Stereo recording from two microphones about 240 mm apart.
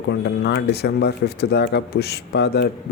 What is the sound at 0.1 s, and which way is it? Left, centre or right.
A man's voice, left.